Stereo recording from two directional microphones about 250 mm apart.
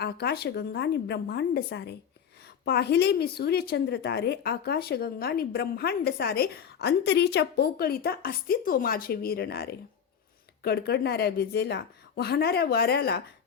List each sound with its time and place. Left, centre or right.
0.0 s a woman's voice: left